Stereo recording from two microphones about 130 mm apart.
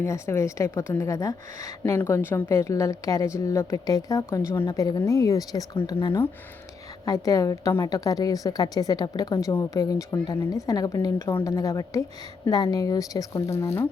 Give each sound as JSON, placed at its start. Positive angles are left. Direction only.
{"t": 0.0, "sound": "a woman's voice", "side_deg": 20}
{"t": 1.8, "sound": "a woman's voice", "side_deg": 15}